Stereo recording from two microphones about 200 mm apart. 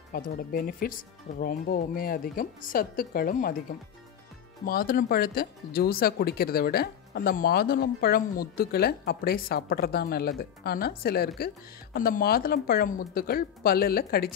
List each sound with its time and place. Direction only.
0.1 s speech: 45° left (ahead or behind)
4.6 s speech: 45° left (ahead or behind)